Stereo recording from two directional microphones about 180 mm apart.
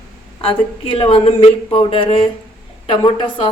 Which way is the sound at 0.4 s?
30° left (ahead or behind).